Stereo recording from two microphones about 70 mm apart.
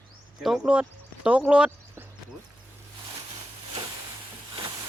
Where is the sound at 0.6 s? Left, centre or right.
Centre.